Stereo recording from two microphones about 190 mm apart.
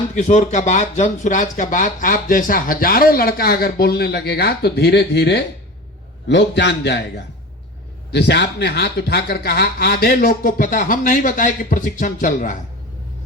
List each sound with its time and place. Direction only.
0.2 s a man's voice: 40° left (ahead or behind); by 7.0 s 65° left (ahead or behind)
8.1 s speech: 65° left (ahead or behind); by 12.5 s 45° left (ahead or behind)